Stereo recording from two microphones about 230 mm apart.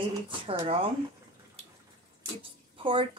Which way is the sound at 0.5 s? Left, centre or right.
Right.